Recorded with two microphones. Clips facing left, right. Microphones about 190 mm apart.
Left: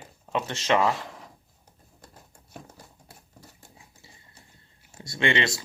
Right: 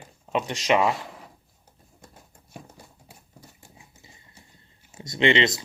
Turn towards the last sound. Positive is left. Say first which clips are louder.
# right 4 dB
turn(degrees=-20)  # may be behind; listen again after turning